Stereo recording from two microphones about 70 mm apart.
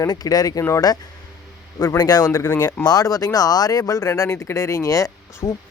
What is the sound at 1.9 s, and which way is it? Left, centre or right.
Speech, left.